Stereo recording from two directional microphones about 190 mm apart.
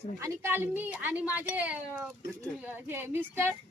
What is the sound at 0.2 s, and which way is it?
A woman's voice, 10° right (ahead or behind).